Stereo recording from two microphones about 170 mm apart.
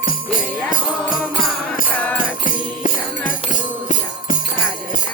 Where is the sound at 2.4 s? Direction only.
50° left (ahead or behind).